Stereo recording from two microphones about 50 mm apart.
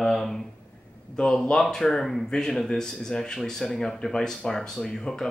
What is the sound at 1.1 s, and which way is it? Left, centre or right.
Speech, centre.